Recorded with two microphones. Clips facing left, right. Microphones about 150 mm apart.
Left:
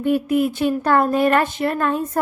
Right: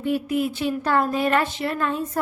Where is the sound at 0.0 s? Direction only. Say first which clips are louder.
Left 5 dB; 55° left (ahead or behind).